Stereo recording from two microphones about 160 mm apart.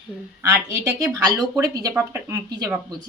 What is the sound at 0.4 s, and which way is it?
A woman's voice, 15° right (ahead or behind).